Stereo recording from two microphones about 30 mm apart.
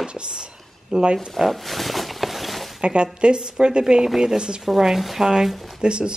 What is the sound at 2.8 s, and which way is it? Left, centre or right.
A woman's voice, right.